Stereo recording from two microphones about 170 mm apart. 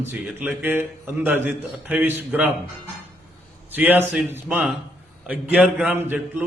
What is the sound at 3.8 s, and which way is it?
Speech, 10° right (ahead or behind).